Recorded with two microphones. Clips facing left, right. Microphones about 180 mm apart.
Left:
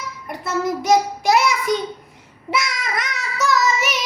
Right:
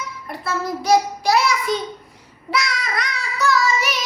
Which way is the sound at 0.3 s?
20° left (ahead or behind).